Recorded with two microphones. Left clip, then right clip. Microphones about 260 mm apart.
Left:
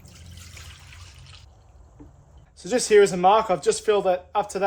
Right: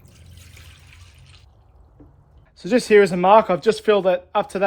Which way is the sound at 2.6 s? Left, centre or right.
Right.